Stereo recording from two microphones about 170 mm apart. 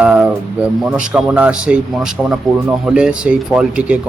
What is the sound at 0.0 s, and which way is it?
Speech, 5° right (ahead or behind).